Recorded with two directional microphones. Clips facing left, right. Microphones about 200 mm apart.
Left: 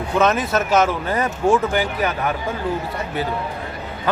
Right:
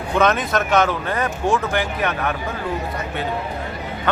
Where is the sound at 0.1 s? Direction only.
5° left (ahead or behind).